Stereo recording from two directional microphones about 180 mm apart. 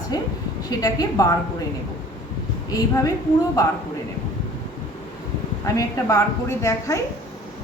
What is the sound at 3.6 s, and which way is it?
Speech, 20° left (ahead or behind).